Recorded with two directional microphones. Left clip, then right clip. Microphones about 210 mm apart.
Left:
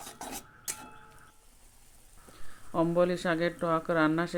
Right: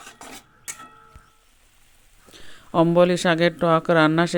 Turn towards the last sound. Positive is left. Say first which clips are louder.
# right 10 dB
turn(degrees=-35)  # may be behind; listen again after turning